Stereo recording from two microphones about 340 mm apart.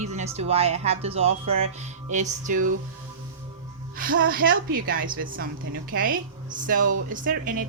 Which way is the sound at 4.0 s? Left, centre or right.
Right.